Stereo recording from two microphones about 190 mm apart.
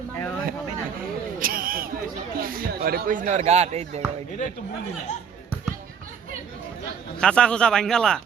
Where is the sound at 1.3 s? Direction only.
50° right (ahead or behind).